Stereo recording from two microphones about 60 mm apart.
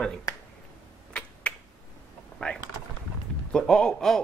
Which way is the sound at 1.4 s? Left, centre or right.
Centre.